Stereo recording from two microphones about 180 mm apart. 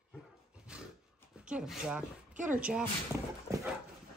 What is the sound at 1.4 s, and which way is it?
A woman's voice, 5° right (ahead or behind).